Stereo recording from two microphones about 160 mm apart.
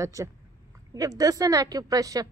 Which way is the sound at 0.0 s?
20° right (ahead or behind).